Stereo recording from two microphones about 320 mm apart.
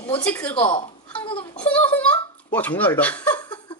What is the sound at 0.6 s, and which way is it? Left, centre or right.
Speech, centre.